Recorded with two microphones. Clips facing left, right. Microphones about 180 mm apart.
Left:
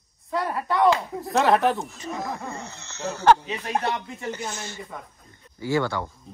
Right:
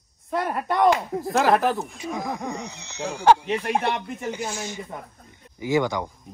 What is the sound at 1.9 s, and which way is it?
Speech, 15° right (ahead or behind).